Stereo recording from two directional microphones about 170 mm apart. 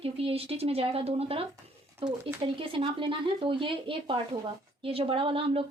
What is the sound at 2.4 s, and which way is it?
A woman's voice, 30° right (ahead or behind).